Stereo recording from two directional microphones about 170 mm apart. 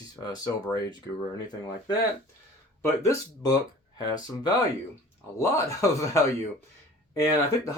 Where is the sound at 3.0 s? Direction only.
20° left (ahead or behind).